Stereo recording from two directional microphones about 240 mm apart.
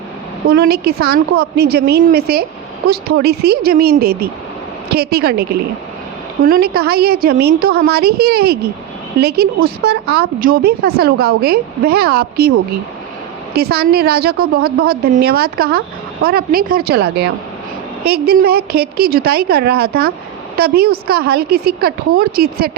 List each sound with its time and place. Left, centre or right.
0.5 s speech: right